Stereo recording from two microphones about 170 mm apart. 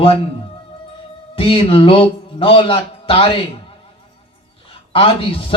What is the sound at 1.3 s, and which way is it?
A man's voice, 30° left (ahead or behind).